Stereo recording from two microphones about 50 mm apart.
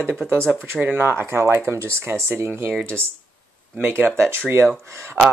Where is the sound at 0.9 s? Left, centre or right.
Right.